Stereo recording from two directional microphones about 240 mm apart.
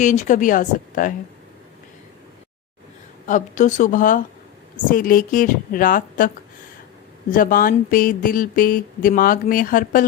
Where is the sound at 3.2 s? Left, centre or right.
Left.